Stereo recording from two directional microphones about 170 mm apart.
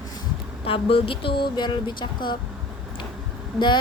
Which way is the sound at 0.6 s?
35° left (ahead or behind).